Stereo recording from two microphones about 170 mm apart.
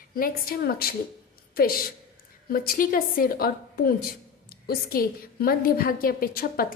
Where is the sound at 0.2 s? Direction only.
60° left (ahead or behind).